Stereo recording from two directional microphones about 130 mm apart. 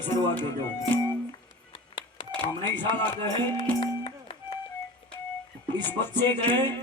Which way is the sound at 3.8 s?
45° left (ahead or behind).